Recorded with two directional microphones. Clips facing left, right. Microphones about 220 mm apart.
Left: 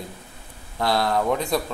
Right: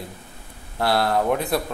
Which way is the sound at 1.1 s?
5° right (ahead or behind).